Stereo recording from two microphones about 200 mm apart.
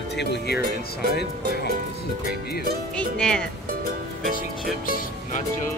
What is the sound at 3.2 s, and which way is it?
Speech, 5° left (ahead or behind).